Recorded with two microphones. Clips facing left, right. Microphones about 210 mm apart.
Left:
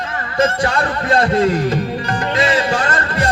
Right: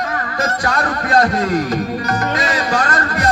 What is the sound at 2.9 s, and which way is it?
Music, 40° right (ahead or behind).